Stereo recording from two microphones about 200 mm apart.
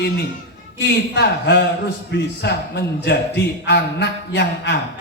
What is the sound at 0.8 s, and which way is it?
A man's voice, 60° left (ahead or behind).